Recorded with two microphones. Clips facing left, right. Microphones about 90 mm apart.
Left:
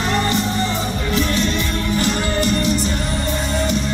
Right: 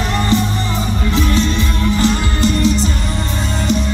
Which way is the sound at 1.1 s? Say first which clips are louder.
Right 3 dB; 30° right (ahead or behind).